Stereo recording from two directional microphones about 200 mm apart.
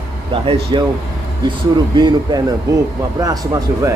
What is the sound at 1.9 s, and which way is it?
Speech, 25° right (ahead or behind).